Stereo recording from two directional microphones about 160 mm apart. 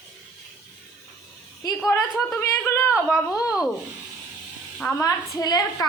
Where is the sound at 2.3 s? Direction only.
15° left (ahead or behind).